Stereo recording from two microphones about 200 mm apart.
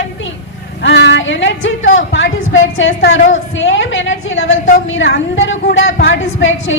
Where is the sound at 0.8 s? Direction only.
60° left (ahead or behind); by 4.6 s 80° left.